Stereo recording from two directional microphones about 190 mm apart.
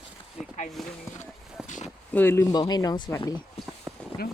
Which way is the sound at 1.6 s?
40° left (ahead or behind).